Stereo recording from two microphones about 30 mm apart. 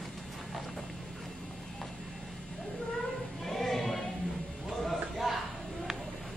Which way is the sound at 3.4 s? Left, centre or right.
Centre.